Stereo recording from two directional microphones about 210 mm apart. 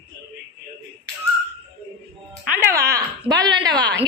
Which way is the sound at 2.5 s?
10° right (ahead or behind).